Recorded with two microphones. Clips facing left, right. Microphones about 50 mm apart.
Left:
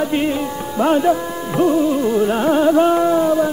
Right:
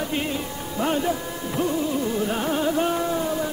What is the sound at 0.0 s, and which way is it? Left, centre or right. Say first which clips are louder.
Music: left 8 dB; left.